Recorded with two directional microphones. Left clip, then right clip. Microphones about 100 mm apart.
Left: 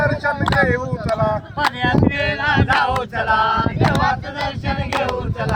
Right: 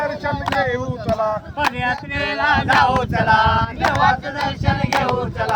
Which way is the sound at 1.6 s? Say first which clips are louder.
Left 3 dB; 20° right (ahead or behind).